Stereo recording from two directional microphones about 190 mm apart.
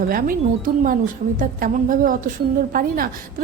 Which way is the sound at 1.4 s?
45° right (ahead or behind).